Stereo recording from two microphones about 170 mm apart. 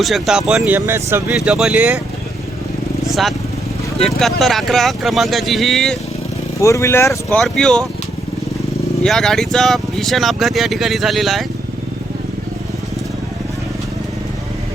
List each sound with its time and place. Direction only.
0.0 s speech: centre (ahead or behind)
1.4 s speech: 5° right (ahead or behind)
3.1 s speech: centre (ahead or behind)
6.6 s speech: 20° left (ahead or behind)
7.3 s speech: 5° left (ahead or behind)
9.0 s speech: centre (ahead or behind)